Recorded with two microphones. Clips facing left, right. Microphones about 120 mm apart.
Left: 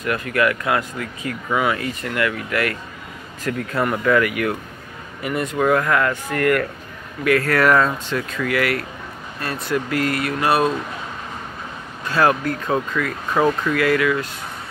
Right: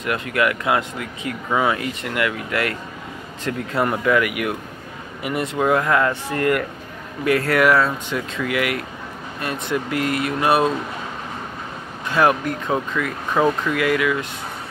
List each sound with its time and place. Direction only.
0.0 s speech: 20° right (ahead or behind)
7.6 s speech: 10° right (ahead or behind)
12.1 s speech: 20° right (ahead or behind)